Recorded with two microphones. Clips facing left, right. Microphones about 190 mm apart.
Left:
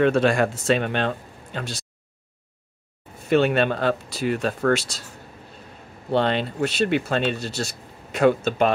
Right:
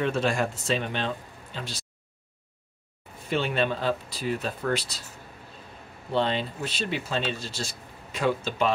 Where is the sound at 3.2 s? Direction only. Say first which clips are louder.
Left 7 dB; 65° left (ahead or behind); by 5.0 s 80° left.